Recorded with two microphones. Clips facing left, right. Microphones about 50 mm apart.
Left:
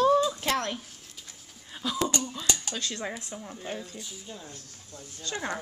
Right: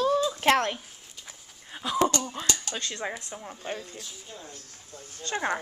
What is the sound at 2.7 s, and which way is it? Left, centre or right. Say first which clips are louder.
Speech: even; right.